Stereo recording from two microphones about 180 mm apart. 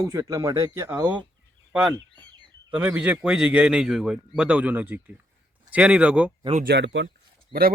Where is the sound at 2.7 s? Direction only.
10° right (ahead or behind).